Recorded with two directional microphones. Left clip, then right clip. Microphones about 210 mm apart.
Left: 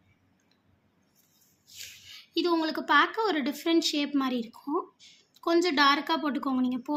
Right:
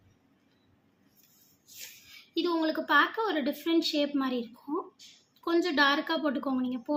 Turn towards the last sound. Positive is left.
turn(degrees=60)  # may be behind; listen again after turning